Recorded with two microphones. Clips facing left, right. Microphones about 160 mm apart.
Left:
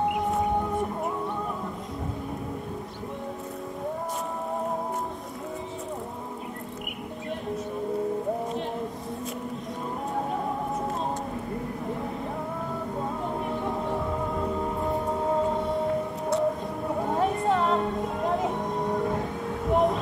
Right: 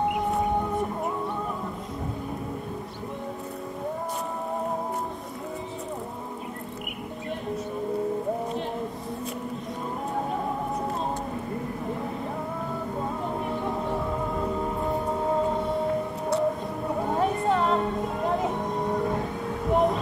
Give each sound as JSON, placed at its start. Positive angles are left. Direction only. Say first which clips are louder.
{"t": 0.0, "sound": "music", "louder": "even", "side_deg": 0}
{"t": 13.0, "sound": "music", "louder": "even", "side_deg": 0}